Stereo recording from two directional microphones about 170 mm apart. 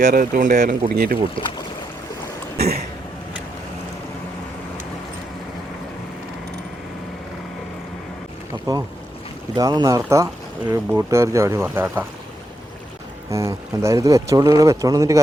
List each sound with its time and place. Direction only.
0.0 s speech: 50° right (ahead or behind)
2.6 s cough: 70° right (ahead or behind)
8.7 s speech: 20° right (ahead or behind)
13.3 s speech: 15° right (ahead or behind)